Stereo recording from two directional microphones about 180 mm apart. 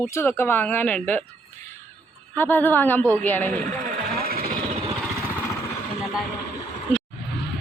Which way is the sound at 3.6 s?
50° right (ahead or behind).